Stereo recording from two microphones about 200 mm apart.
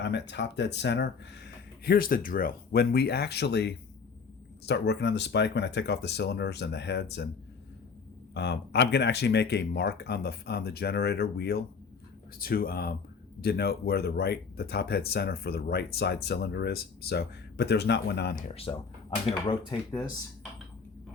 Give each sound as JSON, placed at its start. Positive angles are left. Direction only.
{"t": 0.0, "sound": "speech", "side_deg": 60}
{"t": 8.3, "sound": "speech", "side_deg": 55}
{"t": 18.4, "sound": "speech", "side_deg": 30}